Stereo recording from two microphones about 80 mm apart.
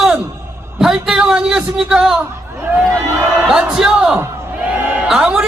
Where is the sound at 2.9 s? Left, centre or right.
Right.